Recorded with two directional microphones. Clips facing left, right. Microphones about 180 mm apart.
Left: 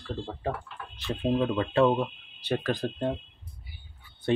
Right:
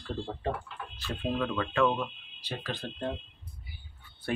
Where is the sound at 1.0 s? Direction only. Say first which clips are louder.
Left 5 dB; 15° left (ahead or behind).